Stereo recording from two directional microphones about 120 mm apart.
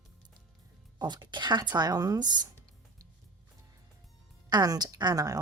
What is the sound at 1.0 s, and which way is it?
Speech, 40° right (ahead or behind).